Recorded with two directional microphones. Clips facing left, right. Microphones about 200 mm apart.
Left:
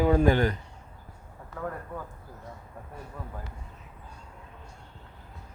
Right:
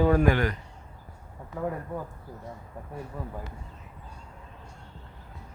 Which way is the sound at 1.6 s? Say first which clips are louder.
Right 4 dB; 15° right (ahead or behind).